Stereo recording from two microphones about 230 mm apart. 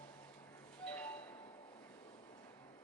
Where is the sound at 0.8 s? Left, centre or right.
Centre.